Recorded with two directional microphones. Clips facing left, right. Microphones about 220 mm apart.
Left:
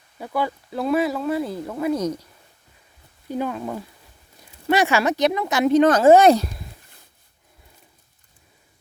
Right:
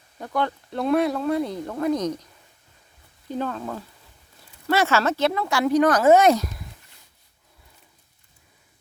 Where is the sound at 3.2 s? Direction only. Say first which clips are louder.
Left 2 dB; 10° left (ahead or behind); by 6.7 s 30° left (ahead or behind).